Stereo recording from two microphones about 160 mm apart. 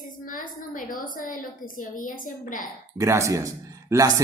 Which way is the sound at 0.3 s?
60° left (ahead or behind).